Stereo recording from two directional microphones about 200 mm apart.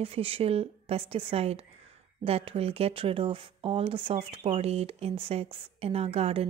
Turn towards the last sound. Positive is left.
turn(degrees=-30)  # may be behind; listen again after turning